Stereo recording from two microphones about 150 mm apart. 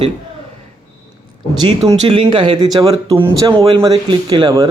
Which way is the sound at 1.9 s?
35° right (ahead or behind).